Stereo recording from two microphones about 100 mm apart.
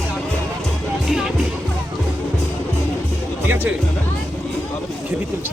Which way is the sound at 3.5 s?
20° right (ahead or behind).